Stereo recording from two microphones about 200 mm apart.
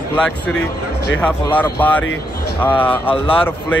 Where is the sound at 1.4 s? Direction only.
10° left (ahead or behind).